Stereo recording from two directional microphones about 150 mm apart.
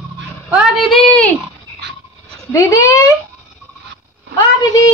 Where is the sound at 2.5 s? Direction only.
20° left (ahead or behind).